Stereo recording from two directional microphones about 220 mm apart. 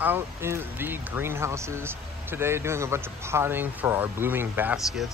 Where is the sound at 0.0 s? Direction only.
10° right (ahead or behind).